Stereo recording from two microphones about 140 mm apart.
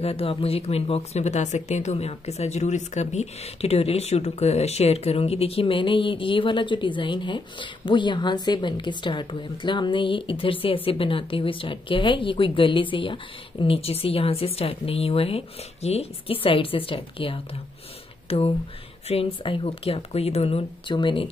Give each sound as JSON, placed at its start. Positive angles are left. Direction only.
{"t": 0.0, "sound": "speech", "side_deg": 45}